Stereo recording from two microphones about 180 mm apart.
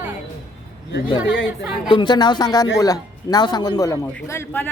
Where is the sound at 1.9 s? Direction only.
25° left (ahead or behind).